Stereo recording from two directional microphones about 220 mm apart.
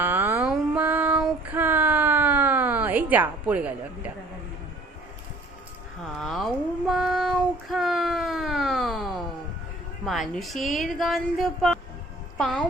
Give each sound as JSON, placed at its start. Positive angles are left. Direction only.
{"t": 0.0, "sound": "female singing", "side_deg": -10}
{"t": 6.1, "sound": "child singing", "side_deg": 0}
{"t": 10.1, "sound": "a woman's voice", "side_deg": 0}